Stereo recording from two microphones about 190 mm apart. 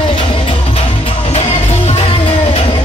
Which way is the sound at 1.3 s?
35° left (ahead or behind).